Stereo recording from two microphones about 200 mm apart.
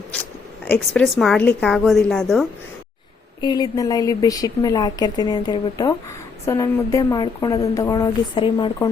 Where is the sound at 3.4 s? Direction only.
20° left (ahead or behind).